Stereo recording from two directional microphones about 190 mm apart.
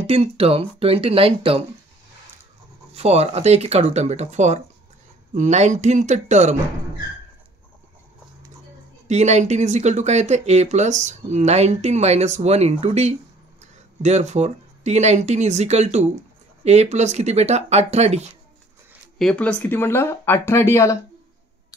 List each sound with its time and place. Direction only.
0.0 s speech: 30° right (ahead or behind)
2.9 s speech: 35° right (ahead or behind)
9.0 s speech: 35° right (ahead or behind)
19.1 s speech: 5° left (ahead or behind)